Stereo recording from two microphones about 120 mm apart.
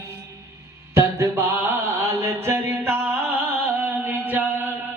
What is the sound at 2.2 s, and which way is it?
Music, 20° right (ahead or behind).